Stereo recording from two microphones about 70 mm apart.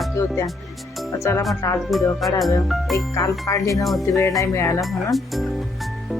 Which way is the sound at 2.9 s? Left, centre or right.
Left.